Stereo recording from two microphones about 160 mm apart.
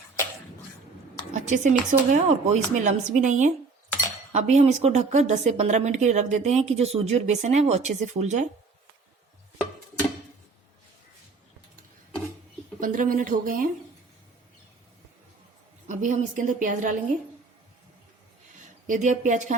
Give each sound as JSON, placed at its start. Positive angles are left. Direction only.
{"t": 1.3, "sound": "a woman's voice", "side_deg": -50}
{"t": 12.8, "sound": "speech", "side_deg": -60}
{"t": 15.9, "sound": "a woman's voice", "side_deg": -50}
{"t": 18.9, "sound": "a woman's voice", "side_deg": -50}